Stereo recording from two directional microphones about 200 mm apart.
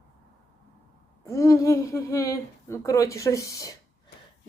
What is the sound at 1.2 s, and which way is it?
Speech, 15° left (ahead or behind).